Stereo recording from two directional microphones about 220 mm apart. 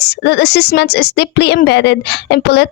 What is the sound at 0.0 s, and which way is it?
Speech, 50° left (ahead or behind).